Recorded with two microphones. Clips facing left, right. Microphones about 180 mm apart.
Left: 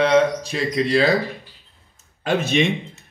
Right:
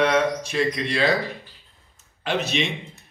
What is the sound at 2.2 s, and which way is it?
Speech, 50° left (ahead or behind).